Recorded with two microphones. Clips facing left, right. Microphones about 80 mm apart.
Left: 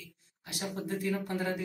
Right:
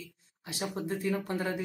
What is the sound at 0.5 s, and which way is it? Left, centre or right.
Speech, right.